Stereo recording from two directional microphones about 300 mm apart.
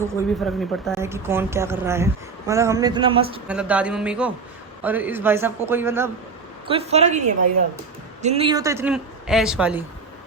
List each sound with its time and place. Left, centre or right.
0.1 s a man's voice: centre
3.4 s a man's voice: centre
6.7 s a woman's voice: right; by 9.8 s centre